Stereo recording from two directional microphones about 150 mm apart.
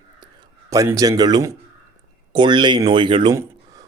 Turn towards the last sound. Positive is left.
turn(degrees=-30)  # may be behind; listen again after turning